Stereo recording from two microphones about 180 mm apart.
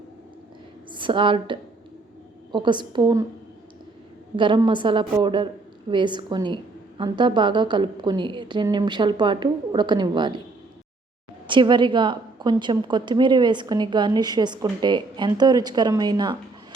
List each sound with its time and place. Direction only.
0.9 s a woman's voice: 25° right (ahead or behind)
4.4 s a woman's voice: 25° right (ahead or behind)
11.4 s a woman's voice: 25° right (ahead or behind)